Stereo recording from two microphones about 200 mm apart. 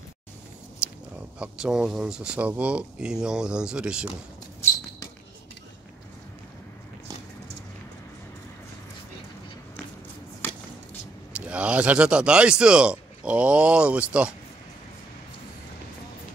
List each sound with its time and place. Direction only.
0.8 s a sound: 5° right (ahead or behind)
1.4 s a man's voice: 5° right (ahead or behind)
11.3 s a man's voice: 5° right (ahead or behind)